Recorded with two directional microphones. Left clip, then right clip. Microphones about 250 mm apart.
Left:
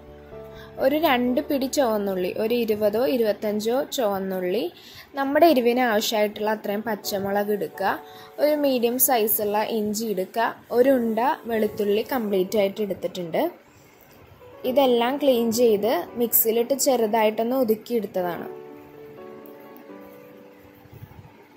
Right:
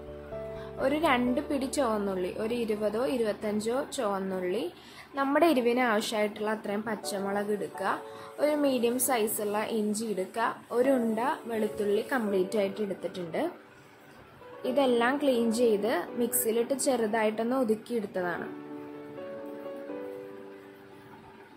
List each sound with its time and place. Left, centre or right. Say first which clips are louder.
0.7 s a woman's voice: left 6 dB; centre
14.6 s a woman's voice: left 6 dB; centre